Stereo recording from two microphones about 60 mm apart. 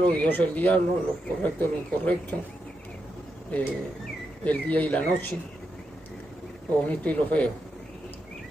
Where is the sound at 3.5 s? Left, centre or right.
Left.